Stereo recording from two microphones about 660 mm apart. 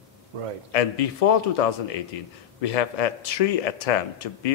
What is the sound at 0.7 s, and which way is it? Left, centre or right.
Speech, left.